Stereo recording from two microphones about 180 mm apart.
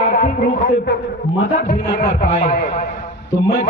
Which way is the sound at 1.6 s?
50° left (ahead or behind).